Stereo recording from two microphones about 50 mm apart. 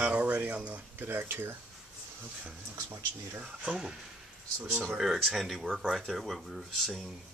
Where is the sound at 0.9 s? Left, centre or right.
Right.